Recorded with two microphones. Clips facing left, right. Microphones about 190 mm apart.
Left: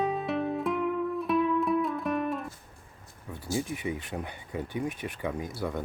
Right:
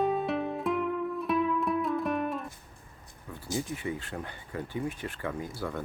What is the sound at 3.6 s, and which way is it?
Speech, 15° left (ahead or behind).